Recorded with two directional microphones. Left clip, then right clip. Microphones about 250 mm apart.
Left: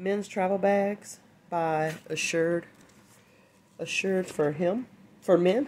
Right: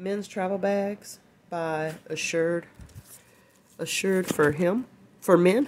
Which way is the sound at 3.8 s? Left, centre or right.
Right.